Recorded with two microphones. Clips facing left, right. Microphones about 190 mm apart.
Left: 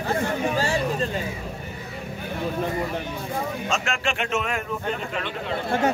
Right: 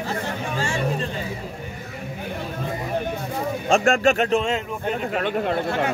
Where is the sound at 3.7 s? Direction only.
50° right (ahead or behind); by 4.6 s 30° right (ahead or behind).